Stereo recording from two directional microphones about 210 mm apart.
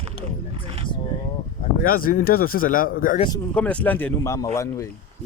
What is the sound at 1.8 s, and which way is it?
Speech, 40° left (ahead or behind).